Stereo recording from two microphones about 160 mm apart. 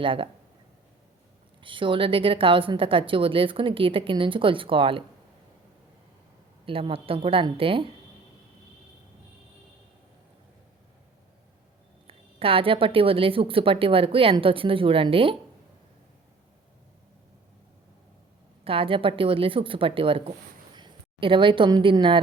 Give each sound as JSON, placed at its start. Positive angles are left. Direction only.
{"t": 0.0, "sound": "a woman's voice", "side_deg": -35}
{"t": 1.6, "sound": "a woman's voice", "side_deg": -30}
{"t": 6.7, "sound": "a woman's voice", "side_deg": -35}
{"t": 12.0, "sound": "a woman's voice", "side_deg": -35}
{"t": 18.6, "sound": "a woman's voice", "side_deg": -35}